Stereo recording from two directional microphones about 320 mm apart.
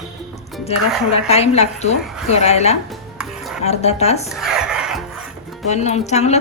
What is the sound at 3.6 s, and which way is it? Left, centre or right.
Speech, centre.